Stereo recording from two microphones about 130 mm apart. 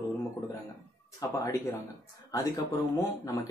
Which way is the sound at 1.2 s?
25° left (ahead or behind).